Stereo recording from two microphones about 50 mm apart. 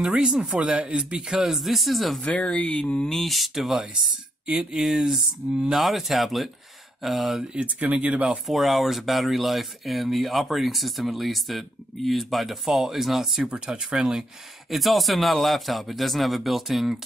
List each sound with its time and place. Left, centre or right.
0.0 s speech: centre
2.2 s speech: left
3.1 s speech: centre
5.8 s speech: centre
7.5 s speech: right
8.5 s speech: centre
13.5 s speech: centre
14.7 s speech: centre